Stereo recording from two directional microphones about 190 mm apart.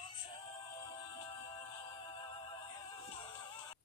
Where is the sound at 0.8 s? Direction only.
25° left (ahead or behind).